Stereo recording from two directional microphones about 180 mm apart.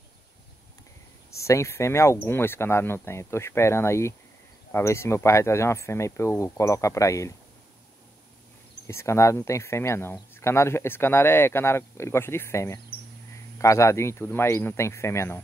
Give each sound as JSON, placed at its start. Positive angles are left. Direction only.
{"t": 1.3, "sound": "speech", "side_deg": 15}
{"t": 8.8, "sound": "speech", "side_deg": 15}